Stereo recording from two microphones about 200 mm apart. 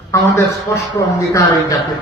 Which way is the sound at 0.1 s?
15° left (ahead or behind).